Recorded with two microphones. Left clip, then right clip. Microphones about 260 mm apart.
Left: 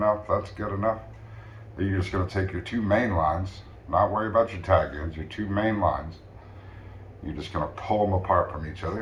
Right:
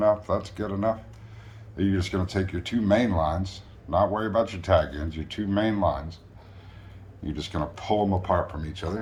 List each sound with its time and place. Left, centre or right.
0.0 s speech: right
7.3 s speech: right